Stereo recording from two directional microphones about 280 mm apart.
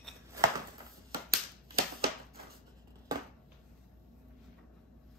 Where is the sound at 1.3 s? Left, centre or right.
Right.